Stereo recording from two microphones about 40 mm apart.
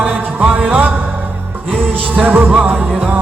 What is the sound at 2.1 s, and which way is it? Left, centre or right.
Music, right.